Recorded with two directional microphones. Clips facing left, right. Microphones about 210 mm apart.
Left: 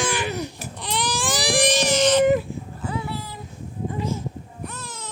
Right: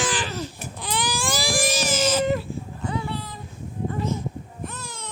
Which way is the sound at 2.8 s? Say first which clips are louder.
Even; 5° left (ahead or behind).